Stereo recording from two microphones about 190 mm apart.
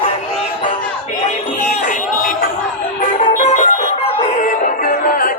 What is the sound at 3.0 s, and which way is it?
Music, 40° left (ahead or behind).